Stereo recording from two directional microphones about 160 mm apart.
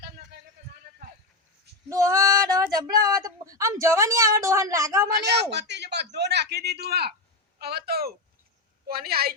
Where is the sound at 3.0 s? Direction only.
25° right (ahead or behind).